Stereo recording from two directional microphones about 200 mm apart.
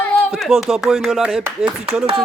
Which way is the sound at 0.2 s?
Centre (ahead or behind).